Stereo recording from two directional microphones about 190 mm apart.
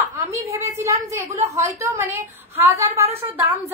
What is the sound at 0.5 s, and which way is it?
A woman's voice, 15° right (ahead or behind).